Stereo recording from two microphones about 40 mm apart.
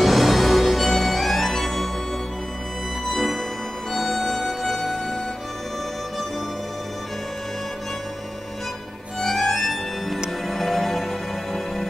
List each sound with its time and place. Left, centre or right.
0.0 s music: centre
3.1 s music: centre
9.2 s music: centre